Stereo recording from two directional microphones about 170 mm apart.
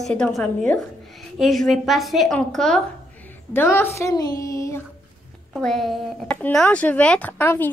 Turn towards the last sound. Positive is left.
turn(degrees=10)  # may be behind; listen again after turning